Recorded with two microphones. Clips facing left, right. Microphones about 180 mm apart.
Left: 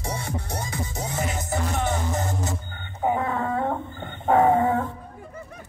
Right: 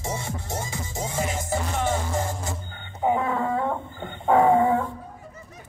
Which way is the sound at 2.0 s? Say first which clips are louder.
Left 1 dB; 20° left (ahead or behind).